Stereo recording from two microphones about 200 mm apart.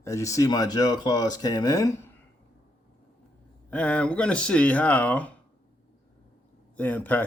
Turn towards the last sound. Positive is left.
turn(degrees=10)  # may be behind; listen again after turning